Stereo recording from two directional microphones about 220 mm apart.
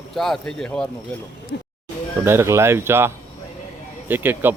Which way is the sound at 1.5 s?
50° left (ahead or behind).